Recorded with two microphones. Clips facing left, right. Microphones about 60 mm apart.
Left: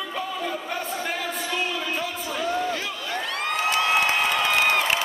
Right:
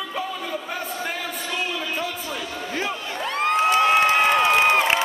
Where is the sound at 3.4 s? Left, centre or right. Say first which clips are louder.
Right 6 dB; right.